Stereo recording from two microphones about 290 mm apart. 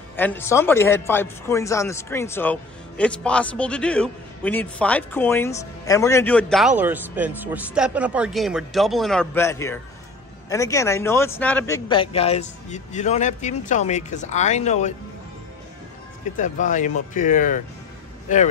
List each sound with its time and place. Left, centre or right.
0.1 s speech: centre; by 15.0 s left
16.3 s speech: left